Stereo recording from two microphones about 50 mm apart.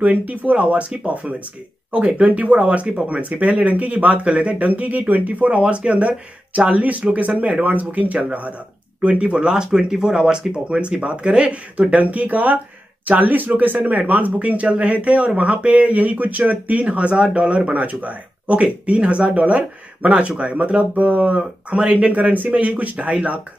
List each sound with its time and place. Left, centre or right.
0.0 s speech: right